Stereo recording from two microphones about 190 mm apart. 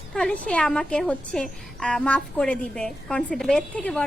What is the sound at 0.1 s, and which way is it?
A woman's voice, 5° left (ahead or behind).